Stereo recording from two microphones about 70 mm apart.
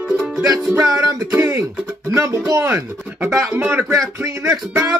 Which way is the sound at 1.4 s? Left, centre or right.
Right.